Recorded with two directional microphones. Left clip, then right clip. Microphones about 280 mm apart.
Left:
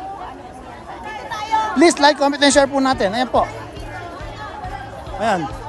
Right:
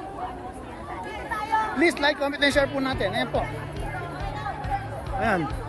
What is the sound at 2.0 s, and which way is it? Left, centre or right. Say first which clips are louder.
Speech: left 9 dB; left.